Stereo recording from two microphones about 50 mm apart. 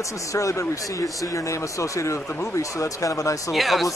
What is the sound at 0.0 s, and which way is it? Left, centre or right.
Speech, left.